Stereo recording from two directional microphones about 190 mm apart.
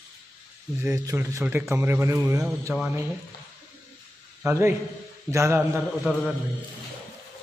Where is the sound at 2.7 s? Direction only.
5° right (ahead or behind).